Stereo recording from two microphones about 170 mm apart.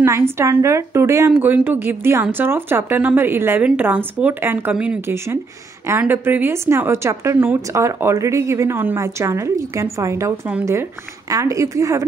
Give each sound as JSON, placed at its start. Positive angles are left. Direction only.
{"t": 0.0, "sound": "speech", "side_deg": -15}